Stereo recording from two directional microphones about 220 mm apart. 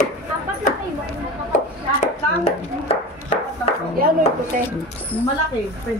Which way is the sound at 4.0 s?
40° right (ahead or behind).